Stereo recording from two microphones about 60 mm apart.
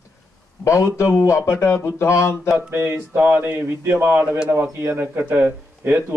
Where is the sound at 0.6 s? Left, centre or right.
Left.